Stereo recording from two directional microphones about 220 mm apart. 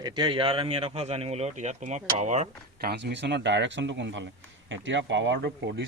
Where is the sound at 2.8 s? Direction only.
50° right (ahead or behind).